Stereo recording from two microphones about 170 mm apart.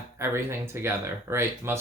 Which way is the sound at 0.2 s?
15° right (ahead or behind).